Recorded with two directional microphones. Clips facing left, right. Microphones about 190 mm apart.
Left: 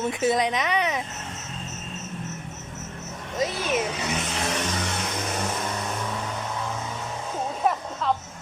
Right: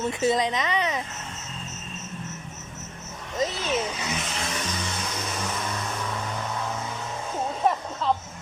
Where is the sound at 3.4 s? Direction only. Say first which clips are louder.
Left 1 dB; 10° left (ahead or behind).